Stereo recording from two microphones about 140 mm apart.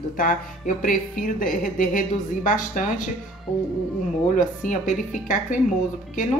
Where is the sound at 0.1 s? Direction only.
80° left.